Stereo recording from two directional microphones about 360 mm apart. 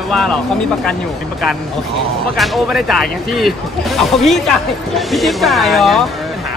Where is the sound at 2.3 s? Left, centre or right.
Centre.